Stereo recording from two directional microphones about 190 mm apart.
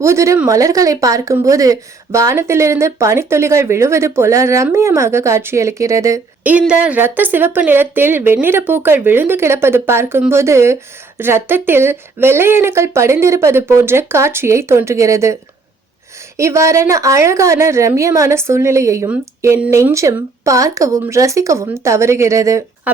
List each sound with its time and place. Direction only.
0.0 s speech: 15° right (ahead or behind)
16.4 s speech: 15° right (ahead or behind)